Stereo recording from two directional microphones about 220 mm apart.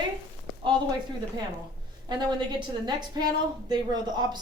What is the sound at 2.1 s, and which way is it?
A woman's voice, 20° right (ahead or behind).